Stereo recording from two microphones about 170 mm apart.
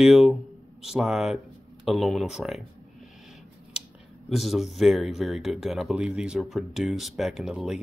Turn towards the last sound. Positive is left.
turn(degrees=0)  # may be behind; listen again after turning